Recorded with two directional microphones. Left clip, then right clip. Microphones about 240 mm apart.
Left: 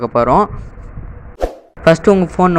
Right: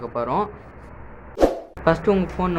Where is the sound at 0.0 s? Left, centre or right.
Left.